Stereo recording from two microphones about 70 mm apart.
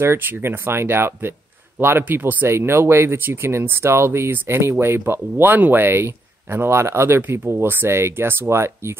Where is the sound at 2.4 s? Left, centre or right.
Right.